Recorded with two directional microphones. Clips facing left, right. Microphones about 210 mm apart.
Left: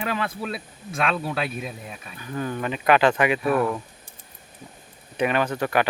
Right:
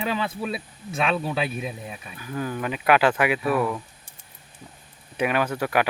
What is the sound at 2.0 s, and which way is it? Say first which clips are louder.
Speech: left 1 dB; 5° right (ahead or behind).